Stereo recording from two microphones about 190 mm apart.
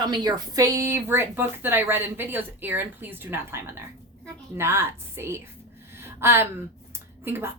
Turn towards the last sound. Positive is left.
turn(degrees=-10)  # may be behind; listen again after turning